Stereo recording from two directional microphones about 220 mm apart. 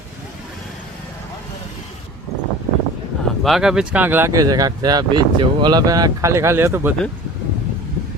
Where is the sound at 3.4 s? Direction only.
Centre (ahead or behind).